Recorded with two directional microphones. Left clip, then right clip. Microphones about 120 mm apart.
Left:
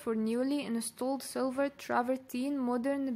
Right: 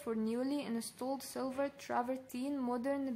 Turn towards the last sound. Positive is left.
turn(degrees=35)  # may be behind; listen again after turning